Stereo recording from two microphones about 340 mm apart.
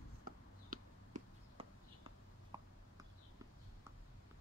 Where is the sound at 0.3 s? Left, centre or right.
Right.